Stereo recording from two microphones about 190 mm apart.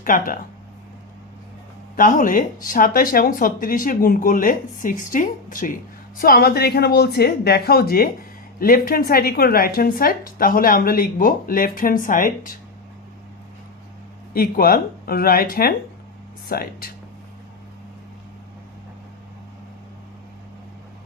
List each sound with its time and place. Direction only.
0.0 s a woman's voice: 45° left (ahead or behind)
2.0 s a woman's voice: 45° left (ahead or behind)
14.3 s a woman's voice: 50° left (ahead or behind)